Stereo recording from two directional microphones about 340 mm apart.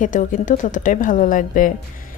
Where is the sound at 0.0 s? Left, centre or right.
Left.